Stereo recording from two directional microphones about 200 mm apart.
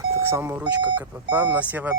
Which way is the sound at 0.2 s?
10° right (ahead or behind).